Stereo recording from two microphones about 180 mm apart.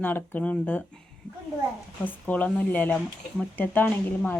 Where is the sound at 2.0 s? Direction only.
10° left (ahead or behind).